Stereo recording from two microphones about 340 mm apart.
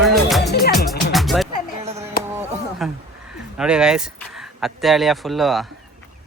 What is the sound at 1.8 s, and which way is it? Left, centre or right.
Chop, centre.